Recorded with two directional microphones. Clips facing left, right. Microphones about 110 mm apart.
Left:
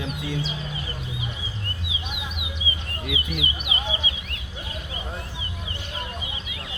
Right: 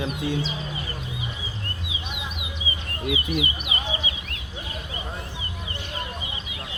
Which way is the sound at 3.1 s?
35° right (ahead or behind).